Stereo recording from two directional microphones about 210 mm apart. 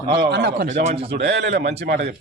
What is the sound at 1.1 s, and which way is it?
Speech, 50° right (ahead or behind).